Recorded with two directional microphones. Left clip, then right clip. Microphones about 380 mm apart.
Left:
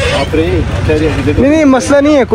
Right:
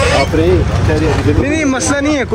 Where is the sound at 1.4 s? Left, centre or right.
Centre.